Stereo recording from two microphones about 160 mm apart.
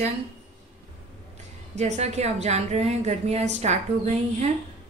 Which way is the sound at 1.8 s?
45° right (ahead or behind).